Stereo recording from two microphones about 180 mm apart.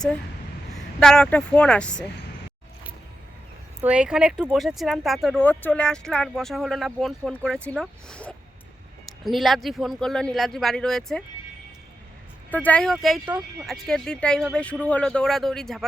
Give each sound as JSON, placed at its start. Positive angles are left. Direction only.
{"t": 0.9, "sound": "speech", "side_deg": 5}
{"t": 3.8, "sound": "speech", "side_deg": -5}
{"t": 12.5, "sound": "speech", "side_deg": 10}